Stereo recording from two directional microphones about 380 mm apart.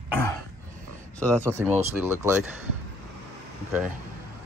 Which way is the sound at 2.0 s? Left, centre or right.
Centre.